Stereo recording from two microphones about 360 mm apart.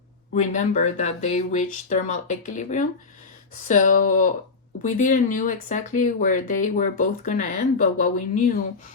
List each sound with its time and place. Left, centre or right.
0.3 s speech: centre